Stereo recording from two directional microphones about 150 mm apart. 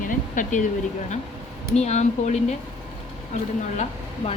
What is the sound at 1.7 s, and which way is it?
Speech, 50° left (ahead or behind).